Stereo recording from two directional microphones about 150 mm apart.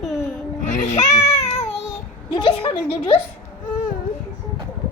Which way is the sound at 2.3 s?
30° left (ahead or behind).